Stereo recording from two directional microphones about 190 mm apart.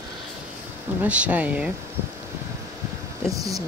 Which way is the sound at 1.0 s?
5° right (ahead or behind).